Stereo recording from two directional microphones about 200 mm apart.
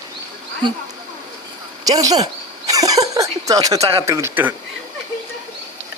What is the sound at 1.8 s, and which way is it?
Speech, 20° right (ahead or behind).